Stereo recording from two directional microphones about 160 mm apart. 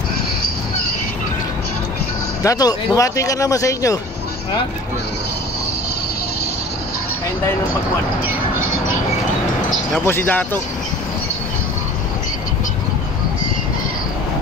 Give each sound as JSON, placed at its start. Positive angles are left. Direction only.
{"t": 2.4, "sound": "speech", "side_deg": 25}
{"t": 10.0, "sound": "speech", "side_deg": 10}